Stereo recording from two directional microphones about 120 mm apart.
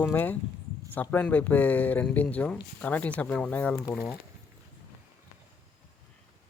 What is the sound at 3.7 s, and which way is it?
Speech, 25° left (ahead or behind).